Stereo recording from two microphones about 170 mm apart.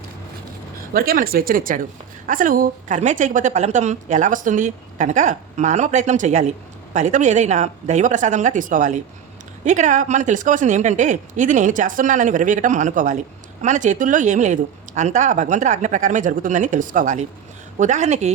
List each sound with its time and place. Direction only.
0.9 s a woman's voice: 60° right (ahead or behind); by 18.3 s 40° right (ahead or behind)